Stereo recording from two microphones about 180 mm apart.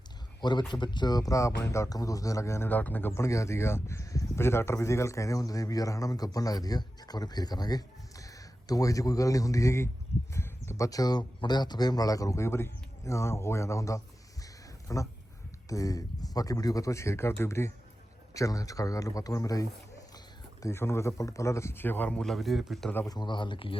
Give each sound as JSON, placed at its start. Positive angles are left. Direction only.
{"t": 0.7, "sound": "a man's voice", "side_deg": 25}
{"t": 10.3, "sound": "a sound", "side_deg": 15}
{"t": 11.3, "sound": "a man's voice", "side_deg": 25}
{"t": 23.0, "sound": "a man's voice", "side_deg": 25}